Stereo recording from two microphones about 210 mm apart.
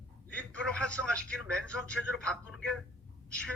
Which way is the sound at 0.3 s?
5° left (ahead or behind).